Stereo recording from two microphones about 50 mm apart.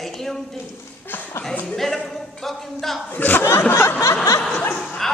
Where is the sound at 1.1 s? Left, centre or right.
Left.